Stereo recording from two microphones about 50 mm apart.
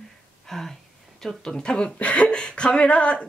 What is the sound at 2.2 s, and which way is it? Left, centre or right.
Speech, centre.